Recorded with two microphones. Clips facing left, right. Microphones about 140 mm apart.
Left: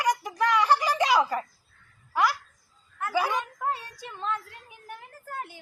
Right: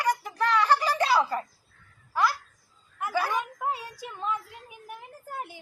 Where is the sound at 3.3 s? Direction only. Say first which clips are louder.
Even; 10° right (ahead or behind).